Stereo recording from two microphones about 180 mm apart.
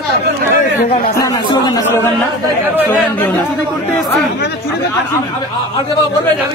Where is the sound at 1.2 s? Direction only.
15° left (ahead or behind).